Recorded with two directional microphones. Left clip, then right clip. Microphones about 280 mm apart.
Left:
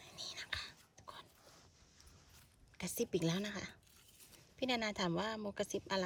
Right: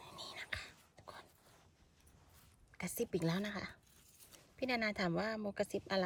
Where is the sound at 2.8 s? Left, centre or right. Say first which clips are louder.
Left 1 dB; centre.